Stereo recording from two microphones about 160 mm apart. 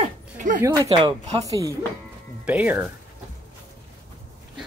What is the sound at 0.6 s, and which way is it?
Speech, 20° right (ahead or behind).